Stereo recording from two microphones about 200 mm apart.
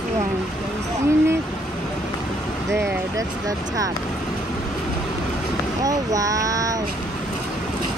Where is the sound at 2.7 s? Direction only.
15° right (ahead or behind).